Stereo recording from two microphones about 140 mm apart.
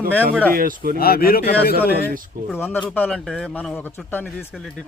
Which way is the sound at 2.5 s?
15° left (ahead or behind).